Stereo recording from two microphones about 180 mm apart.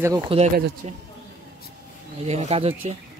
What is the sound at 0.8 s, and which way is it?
Speech, 40° right (ahead or behind).